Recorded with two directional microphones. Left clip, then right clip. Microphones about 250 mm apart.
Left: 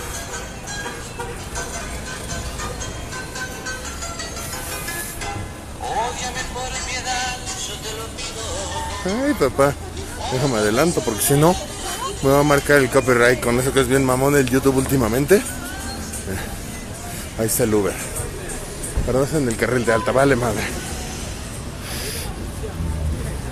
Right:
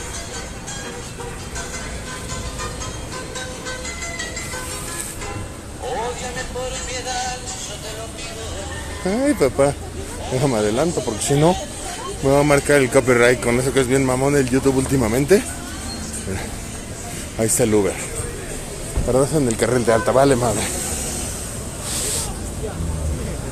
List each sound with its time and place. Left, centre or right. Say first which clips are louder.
6.9 s music: left 3 dB; left
9.2 s a man's voice: right 1 dB; centre
10.7 s a man's voice: left 2 dB; centre
17.6 s speech: right 1 dB; centre
19.1 s a man's voice: right 2 dB; centre